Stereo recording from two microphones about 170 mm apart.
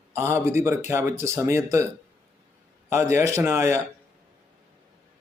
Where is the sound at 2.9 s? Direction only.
15° right (ahead or behind).